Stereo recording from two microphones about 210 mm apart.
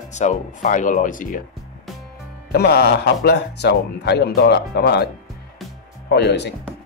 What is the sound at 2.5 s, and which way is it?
Speech, 50° left (ahead or behind).